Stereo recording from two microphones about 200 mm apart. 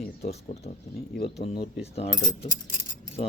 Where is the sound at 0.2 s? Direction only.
30° left (ahead or behind).